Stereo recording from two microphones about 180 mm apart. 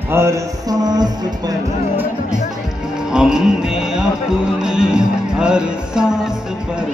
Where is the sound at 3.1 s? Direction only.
5° right (ahead or behind).